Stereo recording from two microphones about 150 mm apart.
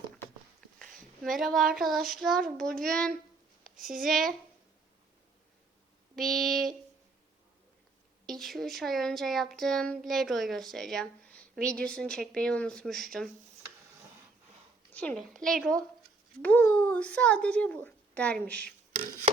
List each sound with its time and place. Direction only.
0.8 s speech: centre (ahead or behind)
3.6 s a sound: 65° right (ahead or behind)
3.9 s speech: centre (ahead or behind)
6.1 s speech: centre (ahead or behind)
8.3 s speech: centre (ahead or behind)
14.9 s a child's voice: 5° left (ahead or behind)